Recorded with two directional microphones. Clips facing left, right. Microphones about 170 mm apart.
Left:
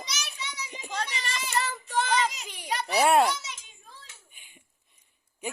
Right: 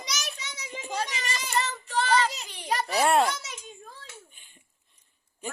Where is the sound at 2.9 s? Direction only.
5° left (ahead or behind).